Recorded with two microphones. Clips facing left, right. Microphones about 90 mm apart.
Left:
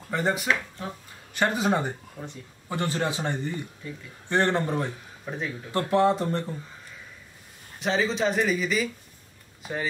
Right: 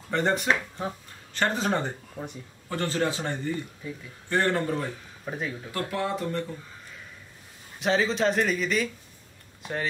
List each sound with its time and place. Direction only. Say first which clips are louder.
0.1 s speech: right 1 dB; 5° left (ahead or behind)
0.5 s speech: right 1 dB; 20° right (ahead or behind)
1.3 s speech: left 2 dB; 10° left (ahead or behind)
5.2 s speech: even; 5° right (ahead or behind)
5.7 s speech: left 9 dB; 30° left (ahead or behind)
7.8 s speech: right 1 dB; centre (ahead or behind)